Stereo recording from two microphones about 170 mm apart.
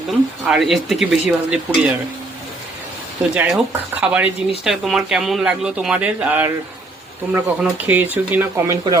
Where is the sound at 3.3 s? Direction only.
5° right (ahead or behind).